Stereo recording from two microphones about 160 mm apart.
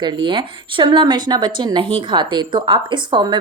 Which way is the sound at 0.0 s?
30° right (ahead or behind).